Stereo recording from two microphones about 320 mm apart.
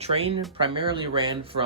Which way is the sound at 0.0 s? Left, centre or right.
Centre.